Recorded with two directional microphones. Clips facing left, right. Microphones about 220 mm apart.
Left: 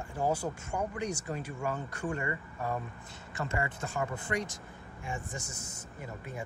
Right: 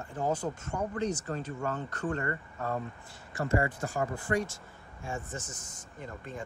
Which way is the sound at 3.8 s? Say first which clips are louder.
Right 2 dB; 20° left (ahead or behind).